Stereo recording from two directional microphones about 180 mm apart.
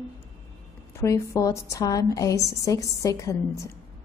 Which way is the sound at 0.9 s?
15° left (ahead or behind).